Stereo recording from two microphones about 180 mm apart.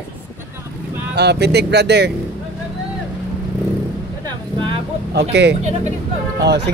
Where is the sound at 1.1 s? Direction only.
70° right (ahead or behind).